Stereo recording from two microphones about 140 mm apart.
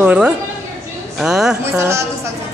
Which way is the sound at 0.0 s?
10° right (ahead or behind).